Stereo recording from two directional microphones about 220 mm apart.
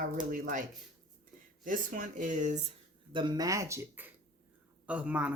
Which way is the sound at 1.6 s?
35° right (ahead or behind).